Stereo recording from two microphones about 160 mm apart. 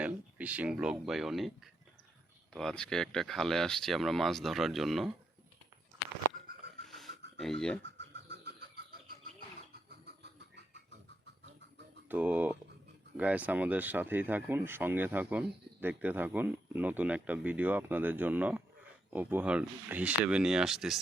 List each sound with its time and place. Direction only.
0.0 s speech: 10° right (ahead or behind)
6.3 s a sound: 60° right (ahead or behind)
6.8 s a sound: centre (ahead or behind)
7.3 s speech: centre (ahead or behind)
7.8 s bird: 90° right; by 9.1 s 75° right (ahead or behind)
12.0 s speech: 10° right (ahead or behind)